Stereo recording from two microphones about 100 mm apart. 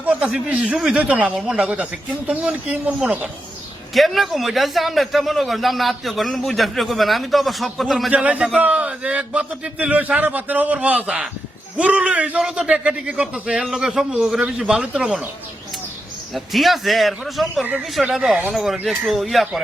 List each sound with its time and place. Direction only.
0.0 s a man's voice: 15° right (ahead or behind)
3.9 s a man's voice: centre (ahead or behind)
8.1 s a man's voice: 10° right (ahead or behind)
16.3 s a man's voice: centre (ahead or behind)